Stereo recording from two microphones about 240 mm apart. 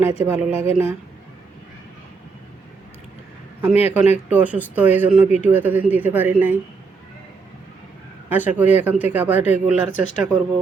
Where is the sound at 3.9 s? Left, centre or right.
Centre.